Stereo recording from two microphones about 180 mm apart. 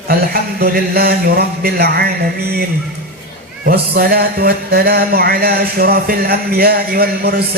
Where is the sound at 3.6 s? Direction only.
60° right (ahead or behind).